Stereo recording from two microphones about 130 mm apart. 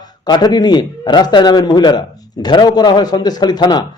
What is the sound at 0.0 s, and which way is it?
A man's voice, 30° left (ahead or behind).